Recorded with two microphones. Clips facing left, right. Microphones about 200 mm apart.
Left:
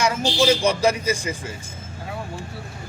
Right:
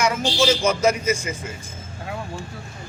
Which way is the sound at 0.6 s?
30° left (ahead or behind).